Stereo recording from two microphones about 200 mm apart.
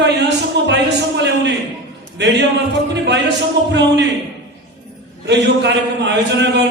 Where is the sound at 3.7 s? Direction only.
60° right (ahead or behind).